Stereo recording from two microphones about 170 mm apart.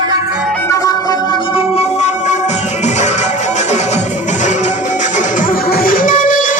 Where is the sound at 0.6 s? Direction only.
20° left (ahead or behind).